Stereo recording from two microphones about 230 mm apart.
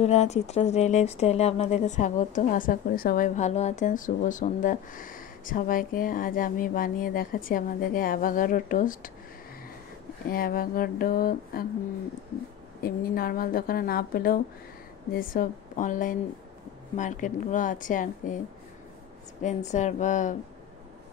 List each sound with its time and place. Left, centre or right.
0.0 s speech: left
10.3 s speech: left
12.8 s speech: left
19.4 s speech: left